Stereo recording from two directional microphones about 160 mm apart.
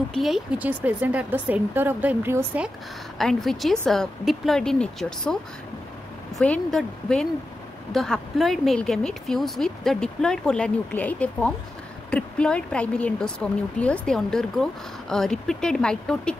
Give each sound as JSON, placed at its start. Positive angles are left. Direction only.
{"t": 0.1, "sound": "speech", "side_deg": 0}
{"t": 3.2, "sound": "speech", "side_deg": 0}